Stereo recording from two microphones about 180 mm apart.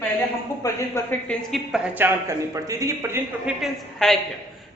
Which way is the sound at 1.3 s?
Centre (ahead or behind).